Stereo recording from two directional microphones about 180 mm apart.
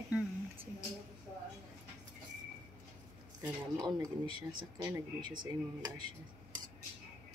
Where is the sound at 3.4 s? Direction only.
20° right (ahead or behind).